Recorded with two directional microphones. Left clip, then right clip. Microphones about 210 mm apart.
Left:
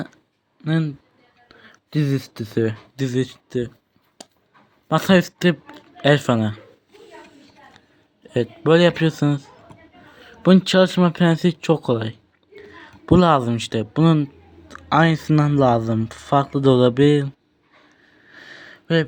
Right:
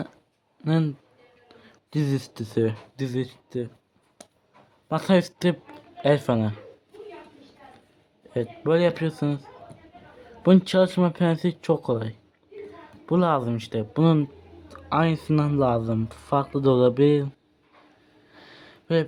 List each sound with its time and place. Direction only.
0.6 s speech: 5° right (ahead or behind); by 3.7 s 10° left (ahead or behind)
4.2 s a sound: 10° left (ahead or behind)
4.9 s speech: 10° left (ahead or behind)
8.3 s speech: 15° left (ahead or behind)
14.0 s speech: 5° left (ahead or behind)
18.3 s a sound: 5° left (ahead or behind)